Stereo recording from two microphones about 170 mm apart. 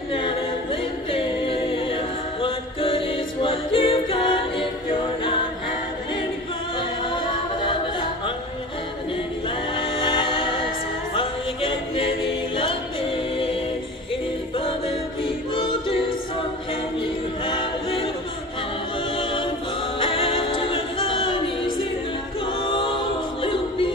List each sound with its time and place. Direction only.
0.1 s a capella: 30° left (ahead or behind)
9.8 s a capella: 30° left (ahead or behind)
11.1 s music: 30° left (ahead or behind)
14.6 s music: 35° left (ahead or behind)
17.5 s choir: 30° left (ahead or behind)
19.1 s choir: 30° left (ahead or behind)
20.0 s music: 30° left (ahead or behind)
22.6 s a capella: 30° left (ahead or behind)
23.4 s choir: 30° left (ahead or behind)